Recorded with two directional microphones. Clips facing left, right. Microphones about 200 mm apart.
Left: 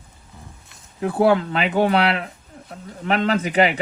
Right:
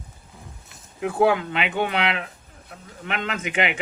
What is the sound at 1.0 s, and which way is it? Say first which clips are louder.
Speech: left 3 dB; 35° left (ahead or behind).